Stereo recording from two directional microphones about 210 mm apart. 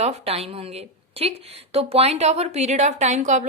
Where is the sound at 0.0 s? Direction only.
30° right (ahead or behind).